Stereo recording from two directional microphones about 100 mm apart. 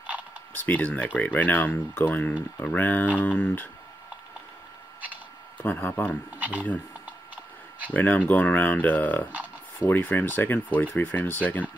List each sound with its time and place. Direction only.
0.6 s speech: 15° left (ahead or behind)
5.6 s speech: 20° left (ahead or behind)
6.3 s speech: 15° right (ahead or behind)
7.9 s speech: 15° left (ahead or behind)